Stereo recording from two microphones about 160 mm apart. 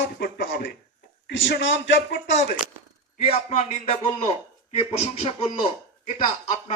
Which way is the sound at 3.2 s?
40° left (ahead or behind).